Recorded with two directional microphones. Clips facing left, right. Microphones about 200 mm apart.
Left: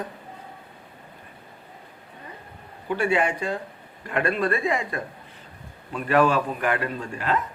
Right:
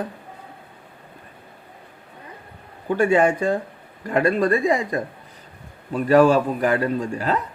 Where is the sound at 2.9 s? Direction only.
45° right (ahead or behind).